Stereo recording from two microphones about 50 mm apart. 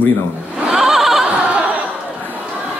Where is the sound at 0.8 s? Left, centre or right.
Centre.